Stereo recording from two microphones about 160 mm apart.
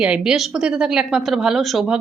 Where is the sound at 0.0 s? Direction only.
5° right (ahead or behind).